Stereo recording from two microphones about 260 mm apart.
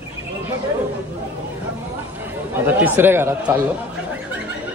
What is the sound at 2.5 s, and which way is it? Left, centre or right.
Speech, centre.